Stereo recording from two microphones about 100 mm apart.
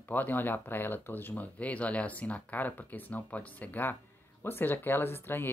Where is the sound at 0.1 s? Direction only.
20° left (ahead or behind).